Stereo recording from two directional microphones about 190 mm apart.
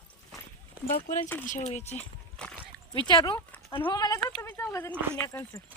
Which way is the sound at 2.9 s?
20° left (ahead or behind).